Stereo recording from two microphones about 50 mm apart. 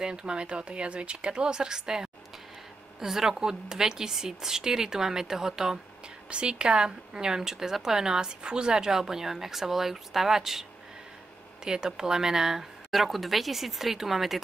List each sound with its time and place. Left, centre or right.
0.0 s speech: centre